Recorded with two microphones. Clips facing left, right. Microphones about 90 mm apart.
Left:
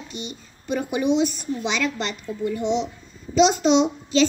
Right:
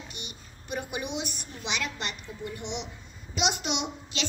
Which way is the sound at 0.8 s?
35° left (ahead or behind).